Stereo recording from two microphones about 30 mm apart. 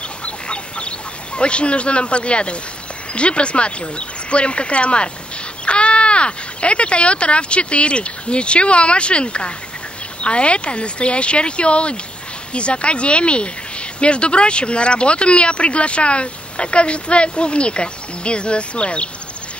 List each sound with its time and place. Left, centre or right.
0.2 s duck: left
3.2 s speech: left